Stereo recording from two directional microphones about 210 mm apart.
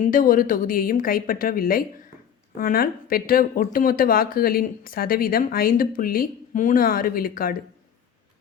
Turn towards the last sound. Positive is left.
turn(degrees=40)  # may be behind; listen again after turning